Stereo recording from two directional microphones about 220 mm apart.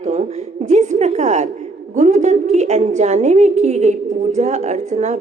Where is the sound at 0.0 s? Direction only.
30° right (ahead or behind).